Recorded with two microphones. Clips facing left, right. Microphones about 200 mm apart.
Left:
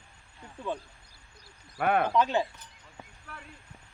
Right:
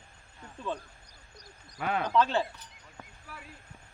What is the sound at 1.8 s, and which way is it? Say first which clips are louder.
Speech: left 5 dB; 60° left (ahead or behind).